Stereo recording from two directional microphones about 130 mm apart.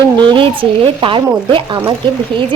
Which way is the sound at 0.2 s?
40° right (ahead or behind).